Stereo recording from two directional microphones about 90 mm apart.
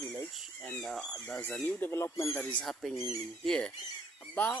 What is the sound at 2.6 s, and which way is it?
Speech, 5° left (ahead or behind).